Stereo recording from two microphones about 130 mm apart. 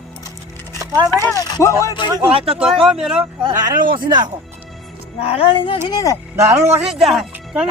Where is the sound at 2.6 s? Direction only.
5° right (ahead or behind).